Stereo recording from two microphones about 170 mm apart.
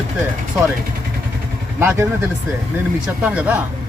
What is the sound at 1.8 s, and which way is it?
Speech, 15° right (ahead or behind).